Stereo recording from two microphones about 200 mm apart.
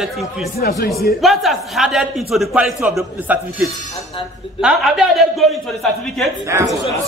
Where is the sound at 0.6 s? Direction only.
50° left (ahead or behind).